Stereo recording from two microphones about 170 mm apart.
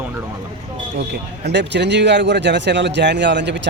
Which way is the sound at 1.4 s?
90° right.